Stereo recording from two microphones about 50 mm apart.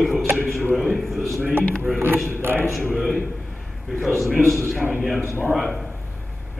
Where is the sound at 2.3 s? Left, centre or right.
Right.